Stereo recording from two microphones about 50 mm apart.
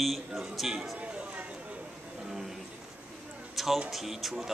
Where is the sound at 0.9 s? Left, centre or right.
Right.